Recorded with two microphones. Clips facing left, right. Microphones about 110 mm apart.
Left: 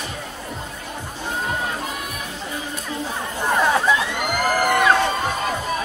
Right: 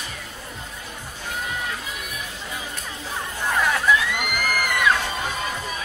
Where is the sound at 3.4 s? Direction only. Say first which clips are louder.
Left 3 dB; 25° left (ahead or behind).